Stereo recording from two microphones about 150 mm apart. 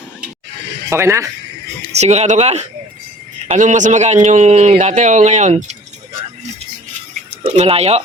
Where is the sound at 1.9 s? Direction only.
50° right (ahead or behind).